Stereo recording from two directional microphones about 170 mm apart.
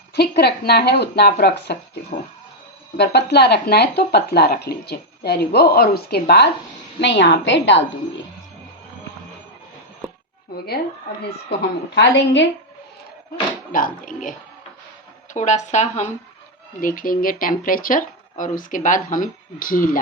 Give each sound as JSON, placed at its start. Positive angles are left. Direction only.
{"t": 0.1, "sound": "speech", "side_deg": 70}
{"t": 3.0, "sound": "speech", "side_deg": 75}
{"t": 7.0, "sound": "a woman's voice", "side_deg": 90}
{"t": 11.9, "sound": "a woman's voice", "side_deg": 90}
{"t": 13.7, "sound": "speech", "side_deg": 55}
{"t": 16.8, "sound": "speech", "side_deg": 55}